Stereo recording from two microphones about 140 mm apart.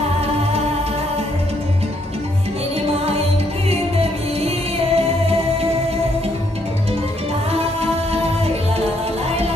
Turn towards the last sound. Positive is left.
turn(degrees=-45)  # may be behind; listen again after turning